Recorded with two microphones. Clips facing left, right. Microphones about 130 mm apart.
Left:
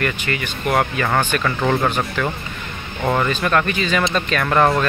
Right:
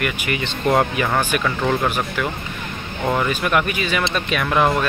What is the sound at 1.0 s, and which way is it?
Speech, 5° right (ahead or behind).